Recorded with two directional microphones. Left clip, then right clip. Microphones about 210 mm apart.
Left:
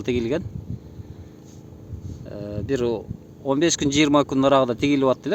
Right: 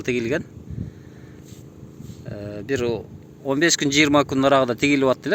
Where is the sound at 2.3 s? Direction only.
15° left (ahead or behind).